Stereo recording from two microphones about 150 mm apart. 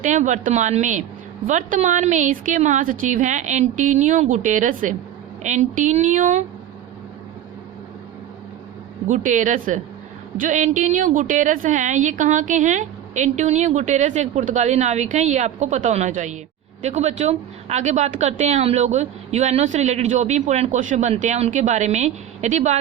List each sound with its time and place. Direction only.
0.0 s a woman's voice: 55° right (ahead or behind)
9.0 s a woman's voice: 55° right (ahead or behind)